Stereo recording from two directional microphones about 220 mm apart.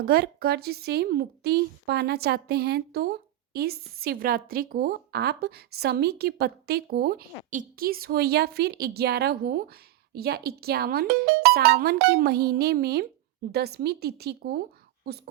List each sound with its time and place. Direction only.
0.0 s a woman's voice: 45° right (ahead or behind)